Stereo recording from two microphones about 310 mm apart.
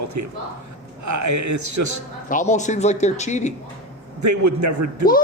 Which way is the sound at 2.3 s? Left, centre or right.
Left.